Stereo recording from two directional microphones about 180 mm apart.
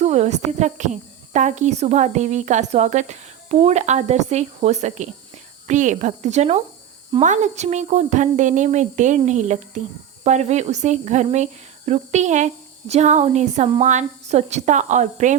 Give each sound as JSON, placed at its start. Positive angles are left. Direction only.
{"t": 0.0, "sound": "a woman's voice", "side_deg": -35}